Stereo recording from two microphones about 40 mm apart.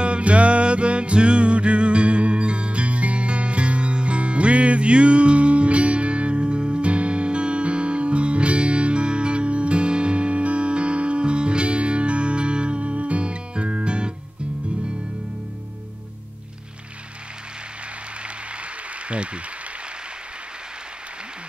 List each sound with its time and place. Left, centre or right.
0.0 s music: right
19.0 s applause: right